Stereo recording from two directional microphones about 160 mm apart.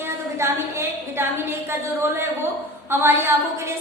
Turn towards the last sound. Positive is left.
turn(degrees=-15)  # may be behind; listen again after turning